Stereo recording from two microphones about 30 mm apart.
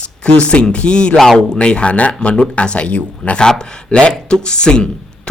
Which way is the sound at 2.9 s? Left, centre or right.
Left.